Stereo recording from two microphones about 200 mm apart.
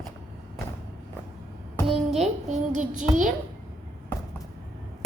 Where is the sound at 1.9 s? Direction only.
30° right (ahead or behind).